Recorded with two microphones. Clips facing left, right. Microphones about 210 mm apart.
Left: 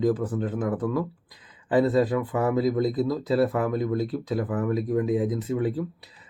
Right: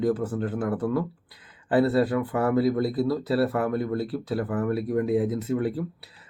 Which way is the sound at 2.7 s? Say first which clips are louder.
Even; 5° right (ahead or behind).